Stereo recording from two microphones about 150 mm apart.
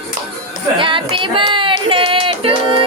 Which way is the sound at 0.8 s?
35° right (ahead or behind).